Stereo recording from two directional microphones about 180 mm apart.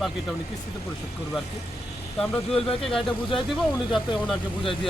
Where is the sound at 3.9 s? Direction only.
Centre (ahead or behind).